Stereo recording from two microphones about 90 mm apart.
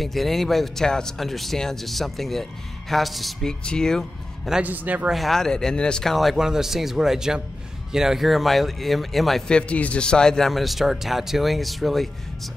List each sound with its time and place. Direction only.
0.0 s a man's voice: centre (ahead or behind)
4.5 s a man's voice: 15° right (ahead or behind)
5.1 s a man's voice: centre (ahead or behind)
9.6 s a man's voice: 15° left (ahead or behind)